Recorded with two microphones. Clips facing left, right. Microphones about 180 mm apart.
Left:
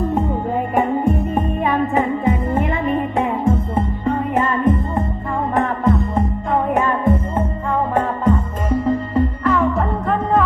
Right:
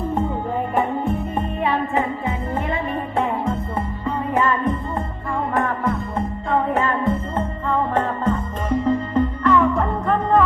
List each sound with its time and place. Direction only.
0.8 s music: 15° left (ahead or behind)